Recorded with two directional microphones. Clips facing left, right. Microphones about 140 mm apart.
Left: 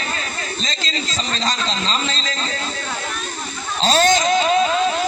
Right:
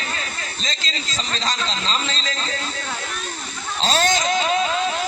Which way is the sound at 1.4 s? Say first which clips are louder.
Left 2 dB; 35° left (ahead or behind).